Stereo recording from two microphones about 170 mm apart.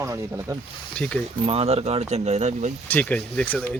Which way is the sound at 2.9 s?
10° left (ahead or behind).